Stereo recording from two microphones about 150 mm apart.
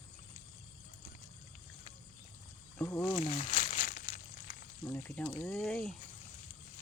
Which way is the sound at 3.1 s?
45° left (ahead or behind).